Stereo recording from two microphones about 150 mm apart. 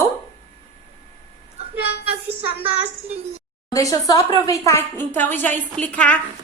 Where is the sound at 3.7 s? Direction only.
20° left (ahead or behind).